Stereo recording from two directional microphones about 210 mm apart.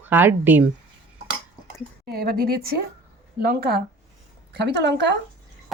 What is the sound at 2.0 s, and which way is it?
A woman's voice, 45° right (ahead or behind).